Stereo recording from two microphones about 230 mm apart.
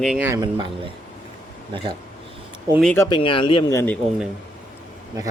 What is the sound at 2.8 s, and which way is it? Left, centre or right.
Speech, centre.